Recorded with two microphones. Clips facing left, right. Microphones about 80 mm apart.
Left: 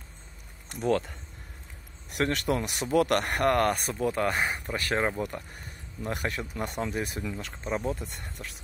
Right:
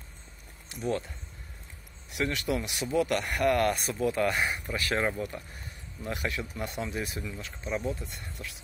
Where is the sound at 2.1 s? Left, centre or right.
Left.